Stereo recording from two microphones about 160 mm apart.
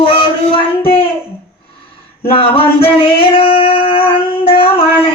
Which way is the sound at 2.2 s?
35° left (ahead or behind).